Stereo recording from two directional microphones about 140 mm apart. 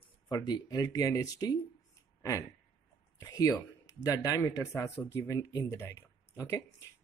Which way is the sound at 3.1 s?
25° left (ahead or behind).